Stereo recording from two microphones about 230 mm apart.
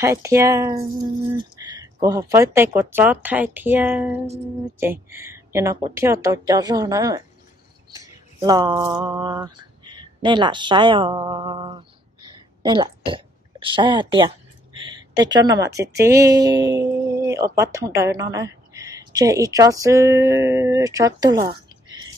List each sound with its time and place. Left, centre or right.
0.0 s speech: centre
7.9 s a sound: centre
12.6 s a woman's voice: right